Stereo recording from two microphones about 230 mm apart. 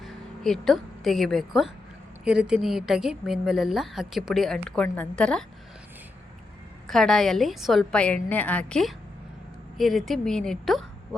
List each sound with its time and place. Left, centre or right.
0.0 s speech: centre
6.8 s speech: centre